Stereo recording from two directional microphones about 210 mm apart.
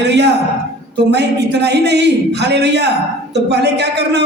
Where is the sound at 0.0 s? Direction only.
55° right (ahead or behind).